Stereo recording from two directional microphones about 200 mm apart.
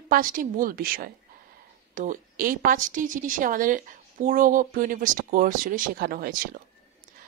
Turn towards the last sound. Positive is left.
turn(degrees=-45)  # may be behind; listen again after turning